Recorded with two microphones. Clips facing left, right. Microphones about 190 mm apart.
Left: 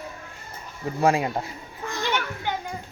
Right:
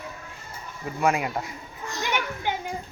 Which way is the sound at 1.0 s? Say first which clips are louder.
Left 3 dB; 30° left (ahead or behind).